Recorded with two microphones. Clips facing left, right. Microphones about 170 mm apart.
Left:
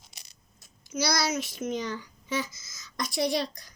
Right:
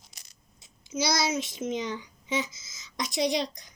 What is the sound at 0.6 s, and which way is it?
A child's voice, 20° right (ahead or behind).